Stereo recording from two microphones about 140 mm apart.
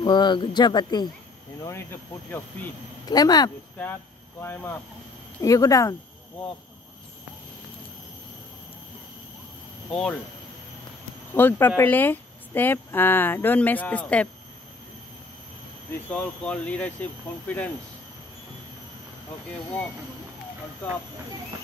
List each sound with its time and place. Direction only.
0.0 s speech: 35° left (ahead or behind)
1.6 s speech: 20° left (ahead or behind)
3.1 s speech: 30° left (ahead or behind)
3.7 s speech: 15° left (ahead or behind)
9.8 s speech: 5° left (ahead or behind)
11.3 s speech: 15° left (ahead or behind)
16.1 s speech: 10° left (ahead or behind)